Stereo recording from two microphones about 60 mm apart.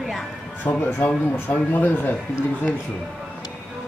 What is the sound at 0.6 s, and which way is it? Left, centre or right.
Speech, left.